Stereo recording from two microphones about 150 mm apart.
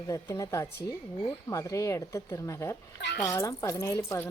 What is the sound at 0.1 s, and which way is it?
A woman's voice, 20° left (ahead or behind).